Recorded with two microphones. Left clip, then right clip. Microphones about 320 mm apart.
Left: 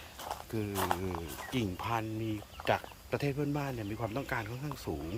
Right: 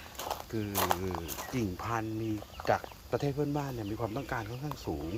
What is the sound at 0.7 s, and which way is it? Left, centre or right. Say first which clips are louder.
Speech: right 3 dB; right.